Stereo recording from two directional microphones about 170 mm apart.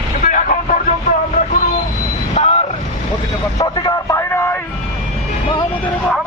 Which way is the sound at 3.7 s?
25° left (ahead or behind).